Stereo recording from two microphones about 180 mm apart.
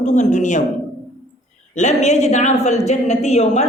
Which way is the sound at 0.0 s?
40° left (ahead or behind).